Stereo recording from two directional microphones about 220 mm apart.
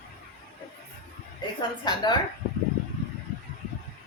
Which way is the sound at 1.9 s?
20° left (ahead or behind).